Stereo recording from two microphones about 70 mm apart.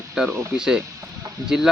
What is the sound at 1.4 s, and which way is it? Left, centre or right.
Speech, right.